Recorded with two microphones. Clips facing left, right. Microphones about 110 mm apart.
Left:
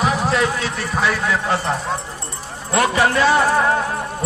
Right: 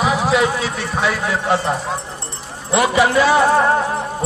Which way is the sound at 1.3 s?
20° right (ahead or behind).